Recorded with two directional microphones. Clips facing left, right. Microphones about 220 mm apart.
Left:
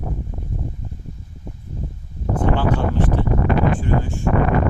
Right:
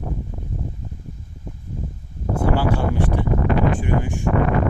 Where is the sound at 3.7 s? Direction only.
15° right (ahead or behind).